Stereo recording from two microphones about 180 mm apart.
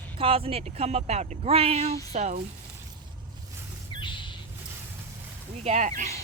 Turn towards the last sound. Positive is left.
turn(degrees=-45)  # may be behind; listen again after turning